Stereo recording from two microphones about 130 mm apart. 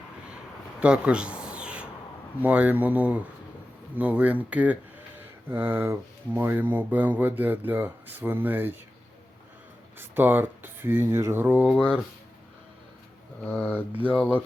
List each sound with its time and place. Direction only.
0.8 s a sound: 10° right (ahead or behind)
2.4 s speech: 10° right (ahead or behind)
10.0 s speech: 15° right (ahead or behind)
13.4 s speech: 15° left (ahead or behind)